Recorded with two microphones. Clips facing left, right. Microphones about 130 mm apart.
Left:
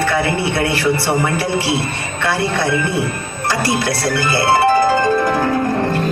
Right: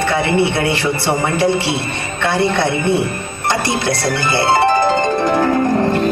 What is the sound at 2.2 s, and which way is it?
A man's voice, 25° right (ahead or behind).